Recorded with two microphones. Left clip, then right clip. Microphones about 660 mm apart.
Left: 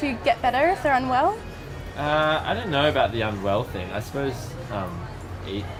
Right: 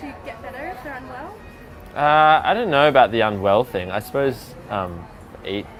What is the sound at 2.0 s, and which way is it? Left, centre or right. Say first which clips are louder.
Speech: right 8 dB; right.